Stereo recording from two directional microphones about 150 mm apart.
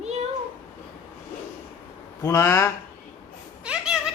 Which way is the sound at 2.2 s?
20° left (ahead or behind).